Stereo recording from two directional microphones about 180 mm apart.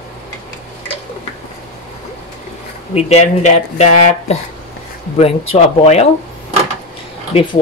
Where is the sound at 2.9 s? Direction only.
40° left (ahead or behind).